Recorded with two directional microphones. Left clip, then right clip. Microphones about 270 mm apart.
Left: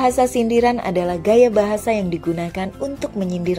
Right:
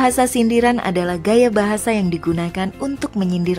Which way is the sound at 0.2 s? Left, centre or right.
Centre.